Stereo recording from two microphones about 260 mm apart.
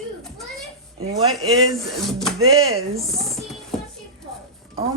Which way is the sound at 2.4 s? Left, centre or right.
Right.